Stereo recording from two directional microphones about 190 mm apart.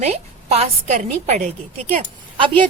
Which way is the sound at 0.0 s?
35° right (ahead or behind).